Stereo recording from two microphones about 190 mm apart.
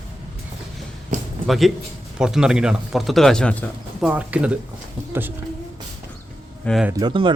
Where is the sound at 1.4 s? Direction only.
Centre (ahead or behind).